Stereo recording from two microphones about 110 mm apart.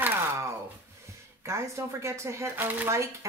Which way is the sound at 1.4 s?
25° right (ahead or behind).